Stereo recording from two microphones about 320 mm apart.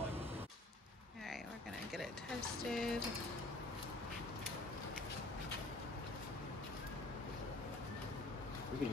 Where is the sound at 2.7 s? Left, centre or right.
Centre.